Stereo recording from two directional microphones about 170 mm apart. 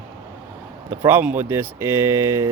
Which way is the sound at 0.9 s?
15° right (ahead or behind).